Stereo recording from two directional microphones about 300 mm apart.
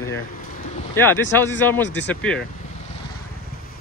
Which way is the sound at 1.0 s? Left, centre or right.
Centre.